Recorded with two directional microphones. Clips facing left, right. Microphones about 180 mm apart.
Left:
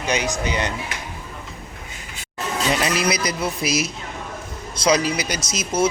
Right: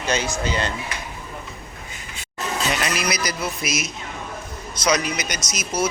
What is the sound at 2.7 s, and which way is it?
Speech, 25° left (ahead or behind).